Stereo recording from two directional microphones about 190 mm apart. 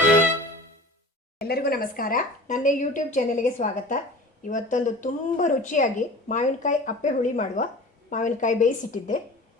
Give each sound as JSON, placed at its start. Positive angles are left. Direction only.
{"t": 1.4, "sound": "a woman's voice", "side_deg": 55}